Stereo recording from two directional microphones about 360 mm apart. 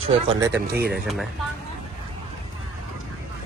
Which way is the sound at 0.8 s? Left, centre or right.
Right.